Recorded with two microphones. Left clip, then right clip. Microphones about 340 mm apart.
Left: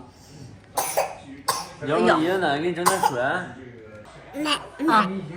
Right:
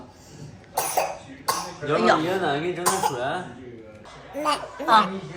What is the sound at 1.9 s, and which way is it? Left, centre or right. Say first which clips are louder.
A woman's voice: left 1 dB; centre.